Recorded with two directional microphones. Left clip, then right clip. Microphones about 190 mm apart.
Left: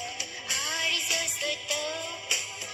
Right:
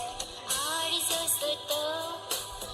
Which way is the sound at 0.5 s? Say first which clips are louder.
Left 3 dB; 50° right (ahead or behind).